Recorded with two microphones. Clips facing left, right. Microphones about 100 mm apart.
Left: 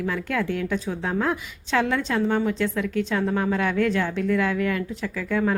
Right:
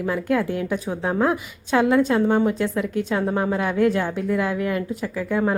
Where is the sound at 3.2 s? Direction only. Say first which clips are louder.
Right 1 dB; 15° right (ahead or behind).